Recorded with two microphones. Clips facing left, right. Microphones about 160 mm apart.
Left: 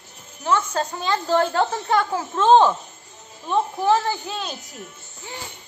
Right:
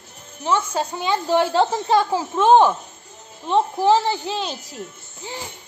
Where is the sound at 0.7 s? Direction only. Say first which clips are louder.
Right 1 dB; 20° right (ahead or behind).